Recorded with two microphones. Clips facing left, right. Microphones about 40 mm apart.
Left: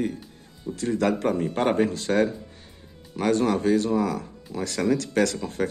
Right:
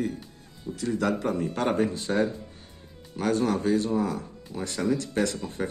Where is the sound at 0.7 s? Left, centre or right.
Left.